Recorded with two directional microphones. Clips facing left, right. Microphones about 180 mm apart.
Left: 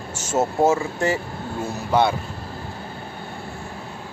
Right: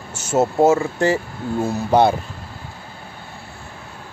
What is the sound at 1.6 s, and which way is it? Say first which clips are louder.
Speech: right 4 dB; 35° right (ahead or behind).